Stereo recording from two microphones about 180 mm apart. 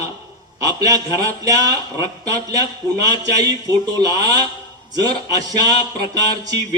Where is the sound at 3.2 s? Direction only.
20° right (ahead or behind).